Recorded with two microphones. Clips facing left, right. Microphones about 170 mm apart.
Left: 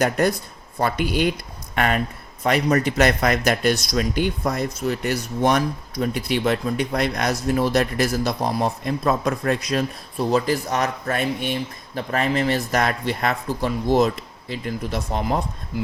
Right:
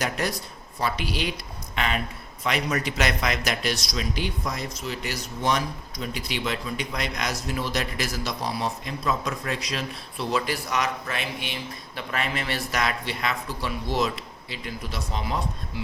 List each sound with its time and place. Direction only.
0.0 s a man's voice: 50° left (ahead or behind)